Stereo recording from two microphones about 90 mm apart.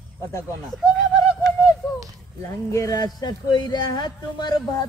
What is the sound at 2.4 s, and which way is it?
Speech, 35° left (ahead or behind).